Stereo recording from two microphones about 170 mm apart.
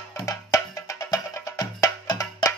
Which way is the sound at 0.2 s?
20° left (ahead or behind).